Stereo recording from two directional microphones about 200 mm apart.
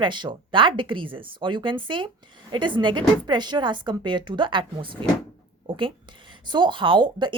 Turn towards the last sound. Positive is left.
turn(degrees=-25)  # may be behind; listen again after turning